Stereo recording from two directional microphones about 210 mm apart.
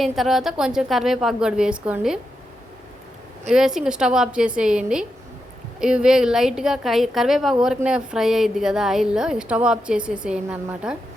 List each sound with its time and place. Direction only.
0.0 s a woman's voice: centre (ahead or behind)
3.5 s a woman's voice: centre (ahead or behind)